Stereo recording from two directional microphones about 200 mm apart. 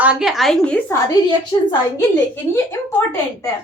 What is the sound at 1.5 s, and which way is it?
Speech, 20° left (ahead or behind).